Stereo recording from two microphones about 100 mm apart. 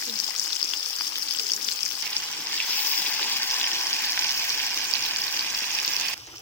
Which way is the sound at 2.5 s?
15° left (ahead or behind).